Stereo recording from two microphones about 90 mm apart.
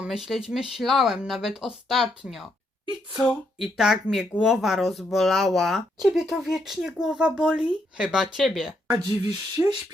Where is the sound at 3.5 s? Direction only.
Centre (ahead or behind).